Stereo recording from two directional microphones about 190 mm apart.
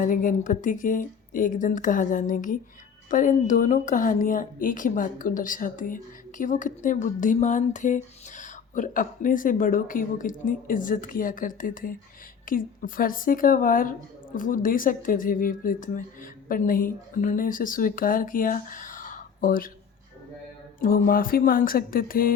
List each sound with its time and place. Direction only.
0.0 s speech: 45° left (ahead or behind)
20.8 s speech: 50° left (ahead or behind)